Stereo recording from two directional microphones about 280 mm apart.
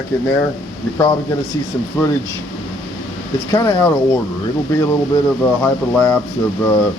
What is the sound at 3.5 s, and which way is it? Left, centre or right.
Speech, centre.